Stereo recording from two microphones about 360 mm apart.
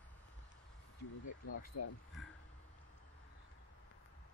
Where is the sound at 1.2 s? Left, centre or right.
Left.